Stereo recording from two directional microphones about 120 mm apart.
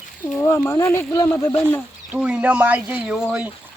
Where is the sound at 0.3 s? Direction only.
20° left (ahead or behind).